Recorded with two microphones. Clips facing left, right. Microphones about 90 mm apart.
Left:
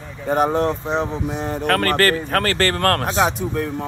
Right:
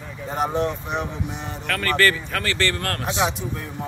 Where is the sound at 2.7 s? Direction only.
55° left (ahead or behind).